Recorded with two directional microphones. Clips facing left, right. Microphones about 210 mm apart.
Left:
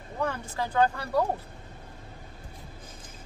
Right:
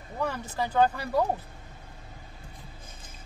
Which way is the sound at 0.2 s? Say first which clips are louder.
Even; 10° right (ahead or behind).